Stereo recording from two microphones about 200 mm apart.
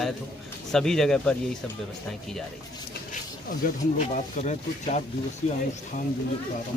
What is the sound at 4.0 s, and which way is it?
Speech, 35° left (ahead or behind).